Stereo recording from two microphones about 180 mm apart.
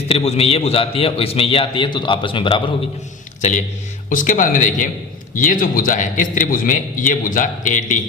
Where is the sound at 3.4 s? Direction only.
40° left (ahead or behind).